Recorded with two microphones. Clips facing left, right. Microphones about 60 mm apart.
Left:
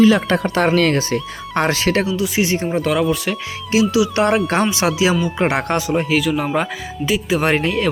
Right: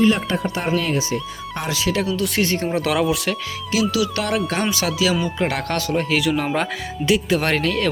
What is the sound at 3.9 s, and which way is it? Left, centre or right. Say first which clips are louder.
Speech: left 6 dB; left.